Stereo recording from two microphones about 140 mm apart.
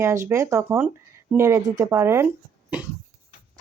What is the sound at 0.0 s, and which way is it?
Speech, 20° right (ahead or behind).